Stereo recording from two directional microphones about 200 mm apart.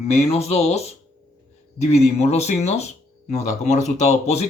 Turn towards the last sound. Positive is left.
turn(degrees=35)  # may be behind; listen again after turning